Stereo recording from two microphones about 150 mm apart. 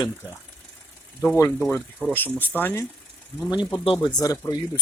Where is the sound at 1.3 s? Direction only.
15° left (ahead or behind).